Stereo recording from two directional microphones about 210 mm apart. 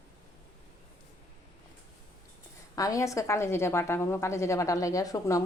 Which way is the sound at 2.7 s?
15° left (ahead or behind).